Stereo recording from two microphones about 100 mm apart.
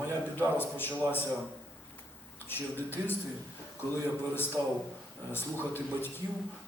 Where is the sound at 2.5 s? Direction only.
20° left (ahead or behind).